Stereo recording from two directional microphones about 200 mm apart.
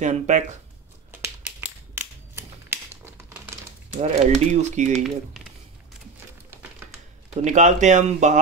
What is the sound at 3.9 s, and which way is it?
Speech, 35° right (ahead or behind).